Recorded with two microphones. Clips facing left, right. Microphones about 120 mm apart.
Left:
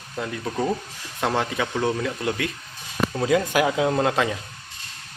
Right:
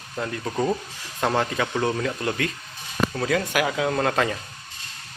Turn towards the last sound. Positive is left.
turn(degrees=10)  # may be behind; listen again after turning